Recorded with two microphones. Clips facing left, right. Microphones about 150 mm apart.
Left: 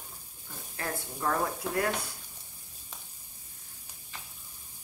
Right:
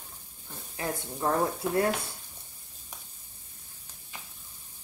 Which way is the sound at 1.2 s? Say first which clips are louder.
Right 3 dB; 25° right (ahead or behind).